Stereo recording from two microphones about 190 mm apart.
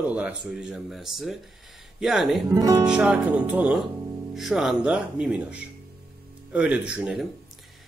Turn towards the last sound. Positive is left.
turn(degrees=-5)  # may be behind; listen again after turning